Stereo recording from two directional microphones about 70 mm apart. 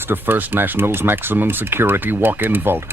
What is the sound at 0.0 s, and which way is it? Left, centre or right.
Speech, right.